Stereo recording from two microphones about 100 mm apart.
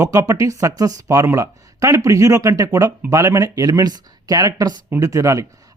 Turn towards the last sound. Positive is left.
turn(degrees=-35)  # may be behind; listen again after turning